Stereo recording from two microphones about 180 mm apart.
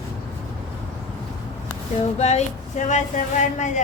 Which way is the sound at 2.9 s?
40° left (ahead or behind).